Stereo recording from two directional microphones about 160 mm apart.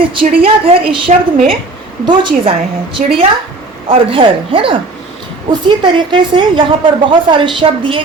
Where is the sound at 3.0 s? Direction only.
55° right (ahead or behind).